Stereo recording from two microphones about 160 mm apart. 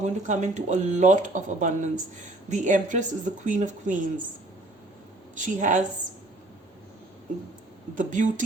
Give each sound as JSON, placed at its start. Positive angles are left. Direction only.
{"t": 0.0, "sound": "speech", "side_deg": -50}
{"t": 5.3, "sound": "speech", "side_deg": -50}
{"t": 7.9, "sound": "speech", "side_deg": -55}